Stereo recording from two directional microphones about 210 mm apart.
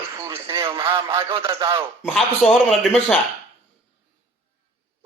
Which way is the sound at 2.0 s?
Centre (ahead or behind).